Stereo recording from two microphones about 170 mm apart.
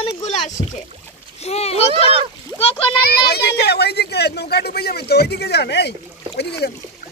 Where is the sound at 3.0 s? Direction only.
65° left (ahead or behind).